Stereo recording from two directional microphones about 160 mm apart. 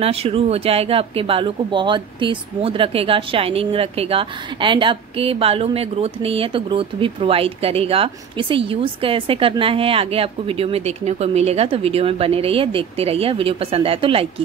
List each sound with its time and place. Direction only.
0.0 s speech: 40° right (ahead or behind)